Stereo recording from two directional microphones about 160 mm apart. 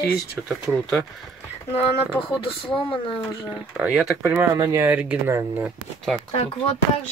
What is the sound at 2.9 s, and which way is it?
Speech, 35° left (ahead or behind).